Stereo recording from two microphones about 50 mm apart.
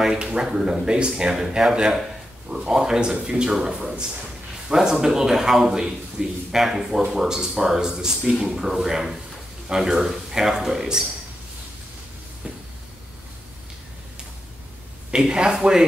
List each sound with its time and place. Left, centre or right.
0.2 s a man's voice: centre
15.0 s a man's voice: centre